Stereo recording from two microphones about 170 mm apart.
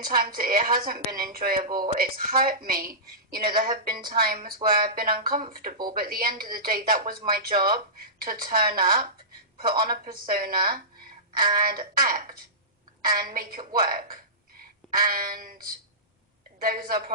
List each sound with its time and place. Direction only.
0.0 s a woman's voice: 55° right (ahead or behind)